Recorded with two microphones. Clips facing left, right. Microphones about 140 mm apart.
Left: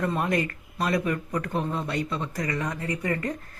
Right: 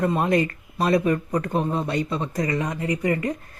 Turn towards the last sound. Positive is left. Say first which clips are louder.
# right 5 dB
turn(degrees=-15)  # may be behind; listen again after turning